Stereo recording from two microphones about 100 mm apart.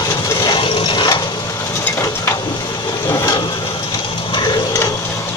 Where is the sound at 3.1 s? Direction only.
35° left (ahead or behind).